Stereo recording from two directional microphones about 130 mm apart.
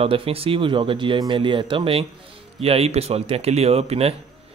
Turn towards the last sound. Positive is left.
turn(degrees=-50)  # may be behind; listen again after turning